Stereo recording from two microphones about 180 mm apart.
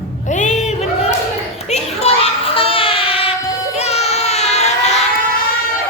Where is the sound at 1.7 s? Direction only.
35° left (ahead or behind).